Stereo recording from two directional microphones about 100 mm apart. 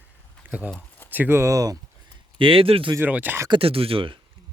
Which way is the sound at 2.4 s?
65° right (ahead or behind).